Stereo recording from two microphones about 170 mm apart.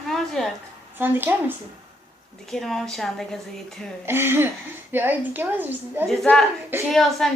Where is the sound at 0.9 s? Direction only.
10° right (ahead or behind).